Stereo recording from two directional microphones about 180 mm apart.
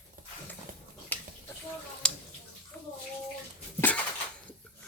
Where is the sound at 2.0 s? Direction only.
5° left (ahead or behind).